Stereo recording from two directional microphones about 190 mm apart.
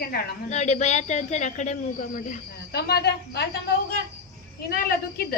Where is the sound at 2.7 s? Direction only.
60° left (ahead or behind).